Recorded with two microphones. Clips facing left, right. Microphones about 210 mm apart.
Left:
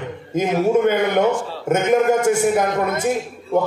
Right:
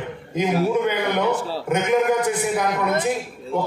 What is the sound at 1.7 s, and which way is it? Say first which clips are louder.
A man's voice: left 3 dB; 45° left (ahead or behind).